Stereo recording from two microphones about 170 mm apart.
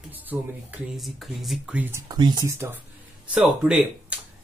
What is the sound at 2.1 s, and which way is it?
Speech, 25° right (ahead or behind).